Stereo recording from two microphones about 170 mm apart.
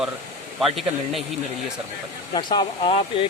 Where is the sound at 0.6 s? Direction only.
Centre (ahead or behind).